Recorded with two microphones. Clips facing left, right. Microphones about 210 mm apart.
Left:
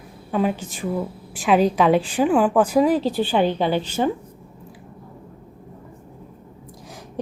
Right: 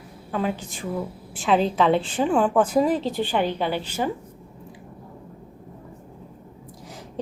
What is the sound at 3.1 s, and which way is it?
Speech, 20° right (ahead or behind).